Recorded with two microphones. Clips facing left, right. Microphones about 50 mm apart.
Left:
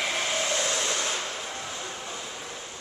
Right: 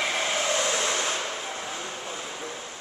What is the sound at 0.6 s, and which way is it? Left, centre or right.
Train, centre.